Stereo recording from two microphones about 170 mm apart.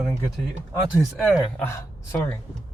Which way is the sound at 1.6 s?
15° left (ahead or behind).